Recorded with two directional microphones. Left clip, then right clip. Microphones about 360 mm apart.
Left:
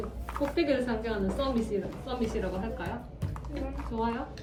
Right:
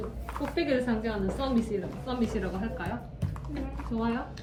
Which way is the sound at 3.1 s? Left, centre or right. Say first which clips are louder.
Even; centre.